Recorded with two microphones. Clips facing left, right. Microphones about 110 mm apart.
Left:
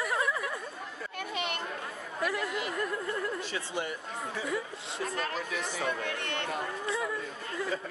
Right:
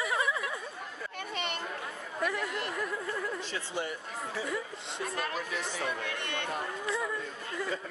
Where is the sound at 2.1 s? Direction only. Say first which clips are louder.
Left 1 dB; centre (ahead or behind).